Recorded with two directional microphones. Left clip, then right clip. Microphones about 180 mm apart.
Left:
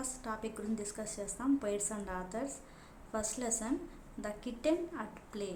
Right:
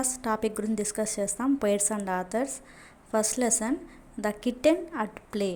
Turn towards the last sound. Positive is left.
turn(degrees=-35)  # may be behind; listen again after turning